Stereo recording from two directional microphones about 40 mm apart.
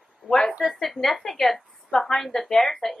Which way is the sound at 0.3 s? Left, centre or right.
Centre.